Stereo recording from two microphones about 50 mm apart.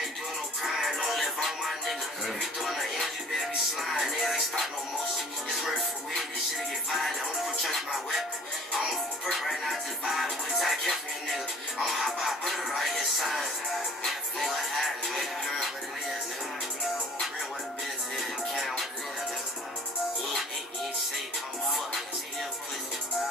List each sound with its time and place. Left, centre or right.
0.6 s music: centre
6.9 s music: centre
18.1 s music: centre